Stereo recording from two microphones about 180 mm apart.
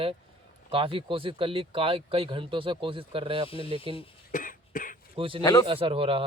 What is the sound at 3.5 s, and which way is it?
Speech, 30° left (ahead or behind).